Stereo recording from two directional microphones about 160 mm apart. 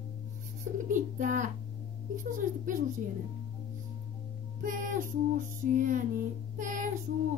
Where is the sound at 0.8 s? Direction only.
55° right (ahead or behind).